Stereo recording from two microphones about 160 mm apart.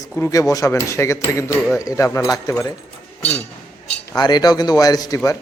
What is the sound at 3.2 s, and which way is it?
Chink, 10° left (ahead or behind).